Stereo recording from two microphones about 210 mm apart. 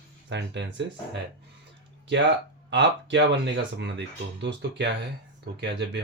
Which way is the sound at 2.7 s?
55° right (ahead or behind).